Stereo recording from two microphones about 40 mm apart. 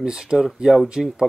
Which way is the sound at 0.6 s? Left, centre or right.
Centre.